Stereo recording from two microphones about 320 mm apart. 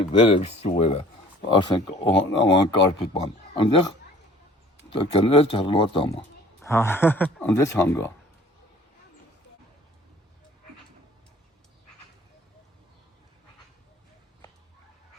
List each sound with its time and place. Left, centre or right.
0.0 s speech: centre
4.9 s speech: centre